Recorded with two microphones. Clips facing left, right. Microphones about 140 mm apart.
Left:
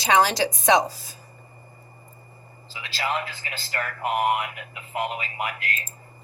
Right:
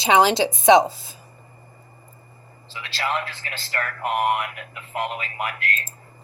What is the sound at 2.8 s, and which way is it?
Speech, 5° left (ahead or behind).